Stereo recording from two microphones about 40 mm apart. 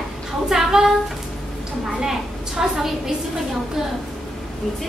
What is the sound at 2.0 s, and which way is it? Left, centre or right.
Speech, centre.